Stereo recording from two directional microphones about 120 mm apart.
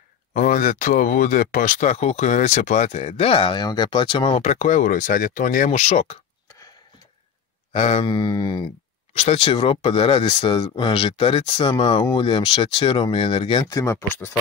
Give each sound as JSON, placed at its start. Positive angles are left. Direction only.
{"t": 0.3, "sound": "speech", "side_deg": 90}
{"t": 4.4, "sound": "speech", "side_deg": 75}
{"t": 7.7, "sound": "speech", "side_deg": 60}
{"t": 8.1, "sound": "a sound", "side_deg": 35}
{"t": 9.1, "sound": "speech", "side_deg": 55}
{"t": 13.7, "sound": "speech", "side_deg": 25}